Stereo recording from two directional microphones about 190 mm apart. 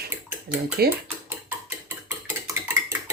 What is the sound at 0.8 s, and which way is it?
Speech, 55° right (ahead or behind).